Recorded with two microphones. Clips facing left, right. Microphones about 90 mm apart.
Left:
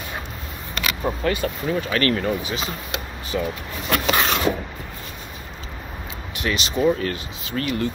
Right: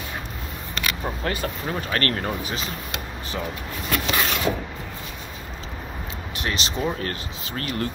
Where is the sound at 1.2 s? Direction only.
40° right (ahead or behind).